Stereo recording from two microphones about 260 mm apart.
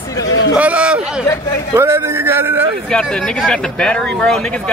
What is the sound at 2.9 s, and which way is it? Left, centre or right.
Speech, centre.